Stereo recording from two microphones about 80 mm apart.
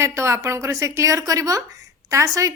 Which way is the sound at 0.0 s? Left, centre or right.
Right.